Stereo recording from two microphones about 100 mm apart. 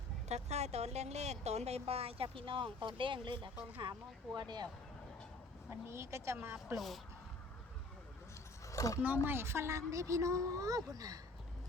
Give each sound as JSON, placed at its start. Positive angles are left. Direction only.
{"t": 0.3, "sound": "speech", "side_deg": -90}
{"t": 3.5, "sound": "speech", "side_deg": -15}
{"t": 4.4, "sound": "speech", "side_deg": -45}
{"t": 5.9, "sound": "a woman's voice", "side_deg": -25}
{"t": 6.7, "sound": "speech", "side_deg": 0}
{"t": 8.6, "sound": "a sound", "side_deg": 30}
{"t": 9.2, "sound": "a woman's voice", "side_deg": -25}